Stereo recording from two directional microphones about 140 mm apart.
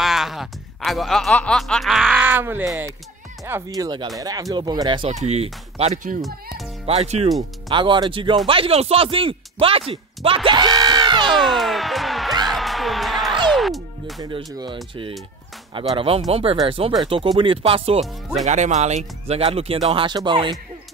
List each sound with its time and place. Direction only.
0.0 s speech: centre (ahead or behind); by 5.1 s 35° right (ahead or behind)
5.1 s speech: 50° right (ahead or behind)
6.2 s music: centre (ahead or behind)
6.9 s speech: 50° right (ahead or behind)
7.2 s speech: centre (ahead or behind)
7.7 s speech: 35° right (ahead or behind)
11.3 s music: centre (ahead or behind)
14.2 s speech: 35° right (ahead or behind)
18.4 s speech: 55° right (ahead or behind); by 20.5 s 35° right (ahead or behind)